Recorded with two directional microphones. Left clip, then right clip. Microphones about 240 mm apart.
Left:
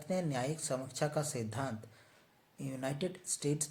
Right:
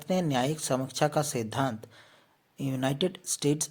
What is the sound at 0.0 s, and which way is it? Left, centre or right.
Speech, right.